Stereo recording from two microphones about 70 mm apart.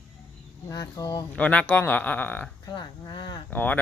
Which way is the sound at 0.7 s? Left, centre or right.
Left.